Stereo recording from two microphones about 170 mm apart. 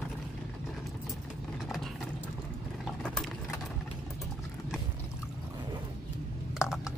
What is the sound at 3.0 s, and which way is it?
Vehicle, 5° left (ahead or behind).